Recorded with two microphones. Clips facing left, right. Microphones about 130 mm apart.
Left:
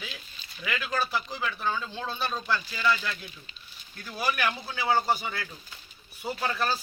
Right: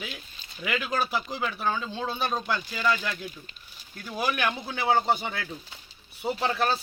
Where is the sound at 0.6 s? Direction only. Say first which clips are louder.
Right 2 dB; 15° right (ahead or behind).